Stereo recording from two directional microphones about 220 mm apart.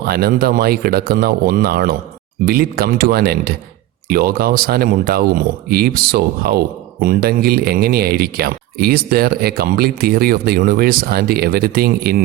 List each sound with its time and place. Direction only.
0.1 s speech: 45° right (ahead or behind)